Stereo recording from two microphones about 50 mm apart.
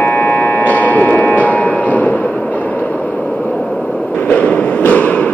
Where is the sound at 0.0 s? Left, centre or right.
Left.